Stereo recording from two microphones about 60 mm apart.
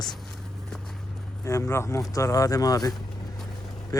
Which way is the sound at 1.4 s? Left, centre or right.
Left.